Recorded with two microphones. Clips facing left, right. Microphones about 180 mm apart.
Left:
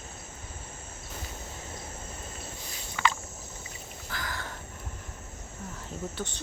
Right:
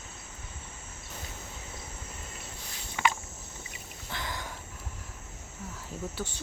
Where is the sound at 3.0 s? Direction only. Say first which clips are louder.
Even; 20° right (ahead or behind).